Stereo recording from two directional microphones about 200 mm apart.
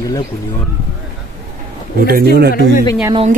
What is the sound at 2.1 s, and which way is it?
Speech, 50° right (ahead or behind).